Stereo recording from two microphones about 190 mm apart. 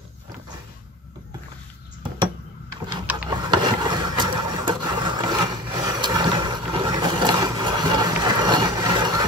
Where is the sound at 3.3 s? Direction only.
20° right (ahead or behind).